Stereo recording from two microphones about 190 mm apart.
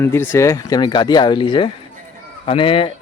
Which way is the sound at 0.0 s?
10° left (ahead or behind).